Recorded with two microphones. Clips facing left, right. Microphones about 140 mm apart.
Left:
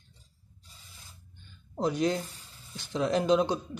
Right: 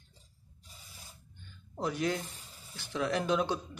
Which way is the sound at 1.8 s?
25° left (ahead or behind).